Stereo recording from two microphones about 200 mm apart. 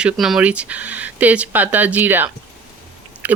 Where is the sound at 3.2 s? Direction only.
10° right (ahead or behind).